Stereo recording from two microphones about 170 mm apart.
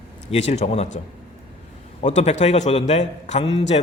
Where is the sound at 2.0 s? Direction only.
40° left (ahead or behind).